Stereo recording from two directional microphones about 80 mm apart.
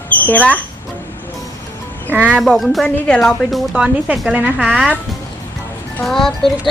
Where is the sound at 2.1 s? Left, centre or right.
Right.